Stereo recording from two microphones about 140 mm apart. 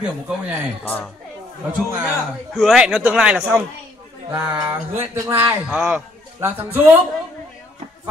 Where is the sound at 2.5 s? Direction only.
5° right (ahead or behind); by 5.5 s 20° right (ahead or behind).